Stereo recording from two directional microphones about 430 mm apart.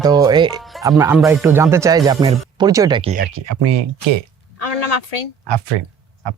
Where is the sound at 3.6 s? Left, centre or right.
Right.